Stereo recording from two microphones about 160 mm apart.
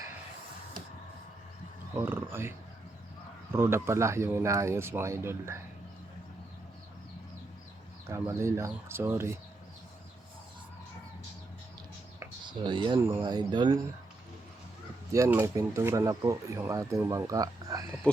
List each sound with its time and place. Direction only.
2.0 s speech: 15° right (ahead or behind)
3.5 s speech: 15° right (ahead or behind)
8.0 s speech: 15° right (ahead or behind)
12.5 s speech: 30° right (ahead or behind)
15.1 s speech: 20° right (ahead or behind)